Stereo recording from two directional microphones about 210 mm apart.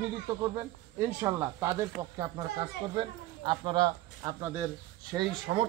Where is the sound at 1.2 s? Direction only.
10° right (ahead or behind).